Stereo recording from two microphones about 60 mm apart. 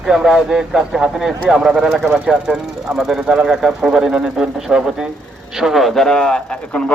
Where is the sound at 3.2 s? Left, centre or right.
Centre.